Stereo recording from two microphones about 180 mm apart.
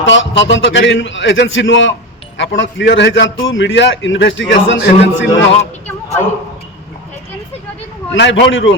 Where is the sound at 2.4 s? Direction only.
80° left.